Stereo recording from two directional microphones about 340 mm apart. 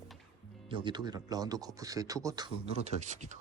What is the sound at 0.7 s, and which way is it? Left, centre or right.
Speech, centre.